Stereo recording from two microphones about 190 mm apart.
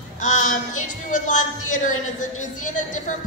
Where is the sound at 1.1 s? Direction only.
40° left (ahead or behind).